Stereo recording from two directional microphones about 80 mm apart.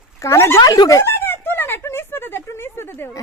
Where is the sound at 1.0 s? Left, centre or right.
Left.